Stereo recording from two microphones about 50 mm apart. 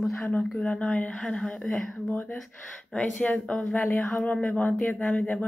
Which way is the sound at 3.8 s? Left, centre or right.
Left.